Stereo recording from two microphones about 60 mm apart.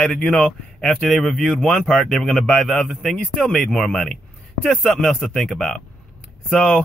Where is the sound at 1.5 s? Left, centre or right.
Centre.